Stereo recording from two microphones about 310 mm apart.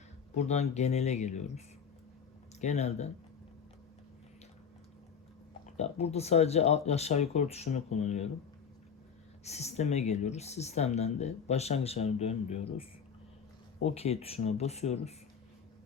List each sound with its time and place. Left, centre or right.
0.3 s speech: left
5.7 s speech: centre
9.4 s speech: left
13.8 s speech: centre